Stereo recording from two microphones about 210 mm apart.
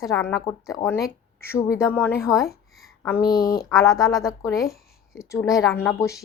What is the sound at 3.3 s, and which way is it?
Speech, 45° left (ahead or behind).